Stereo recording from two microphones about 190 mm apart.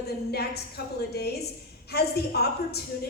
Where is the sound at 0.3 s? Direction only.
55° left (ahead or behind).